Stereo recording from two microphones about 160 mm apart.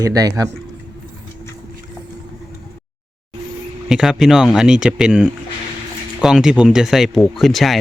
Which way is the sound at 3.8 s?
5° right (ahead or behind).